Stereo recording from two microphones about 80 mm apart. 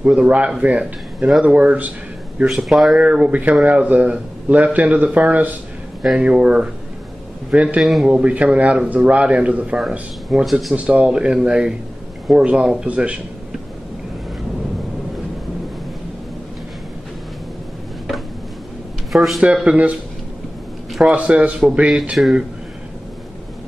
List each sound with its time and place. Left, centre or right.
0.0 s speech: centre
2.4 s speech: centre
3.0 s a man's voice: centre
7.8 s speech: centre
9.8 s speech: centre
10.7 s speech: centre
19.1 s speech: centre
19.4 s speech: centre
21.1 s speech: centre